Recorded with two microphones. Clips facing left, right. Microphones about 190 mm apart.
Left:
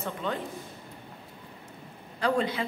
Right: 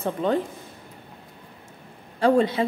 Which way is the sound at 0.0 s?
35° right (ahead or behind).